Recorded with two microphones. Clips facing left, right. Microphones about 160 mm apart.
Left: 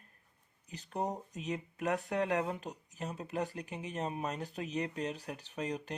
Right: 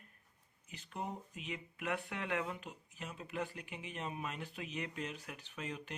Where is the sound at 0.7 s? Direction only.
40° left (ahead or behind).